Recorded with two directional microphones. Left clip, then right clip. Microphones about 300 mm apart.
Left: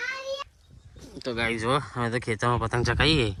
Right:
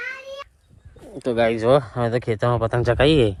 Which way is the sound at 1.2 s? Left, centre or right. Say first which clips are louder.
Right 8 dB; centre.